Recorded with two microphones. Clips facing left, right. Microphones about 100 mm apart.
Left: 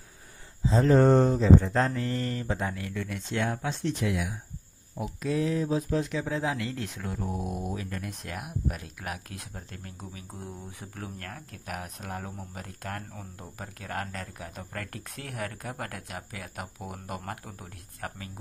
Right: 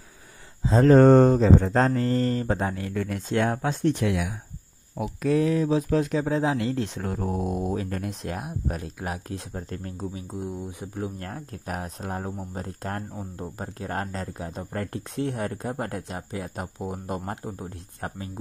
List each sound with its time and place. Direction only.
0.7 s mantra: 55° right (ahead or behind)
4.9 s speech: 65° right (ahead or behind)
6.0 s speech: 40° right (ahead or behind)
9.5 s speech: 40° right (ahead or behind)
10.3 s speech: 20° right (ahead or behind)
13.1 s speech: 20° right (ahead or behind)